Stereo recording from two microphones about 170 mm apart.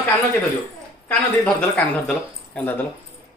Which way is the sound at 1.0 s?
5° left (ahead or behind).